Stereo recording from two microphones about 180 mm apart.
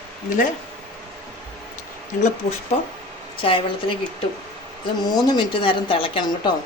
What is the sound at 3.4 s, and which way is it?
Speech, 30° left (ahead or behind).